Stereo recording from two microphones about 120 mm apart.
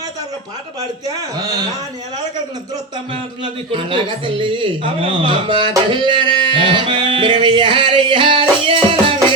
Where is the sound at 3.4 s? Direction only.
45° right (ahead or behind).